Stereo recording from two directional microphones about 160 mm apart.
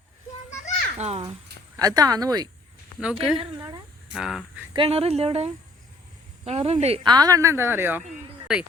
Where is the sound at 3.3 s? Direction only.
30° right (ahead or behind).